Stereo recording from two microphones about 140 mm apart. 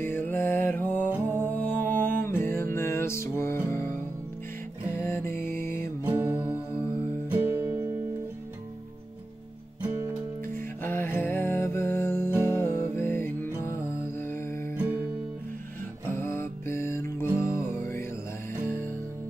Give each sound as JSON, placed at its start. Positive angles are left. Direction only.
{"t": 0.0, "sound": "mantra", "side_deg": 15}
{"t": 1.1, "sound": "music", "side_deg": -15}
{"t": 1.5, "sound": "music", "side_deg": 10}
{"t": 6.0, "sound": "music", "side_deg": -15}
{"t": 10.8, "sound": "music", "side_deg": 15}
{"t": 14.8, "sound": "music", "side_deg": -15}
{"t": 16.1, "sound": "music", "side_deg": 15}